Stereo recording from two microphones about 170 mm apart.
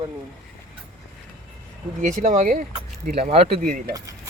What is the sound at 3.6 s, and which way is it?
Speech, 55° right (ahead or behind).